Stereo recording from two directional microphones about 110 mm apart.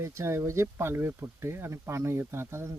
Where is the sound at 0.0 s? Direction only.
25° right (ahead or behind).